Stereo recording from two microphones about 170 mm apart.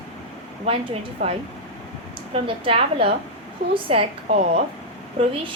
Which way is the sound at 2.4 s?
30° right (ahead or behind).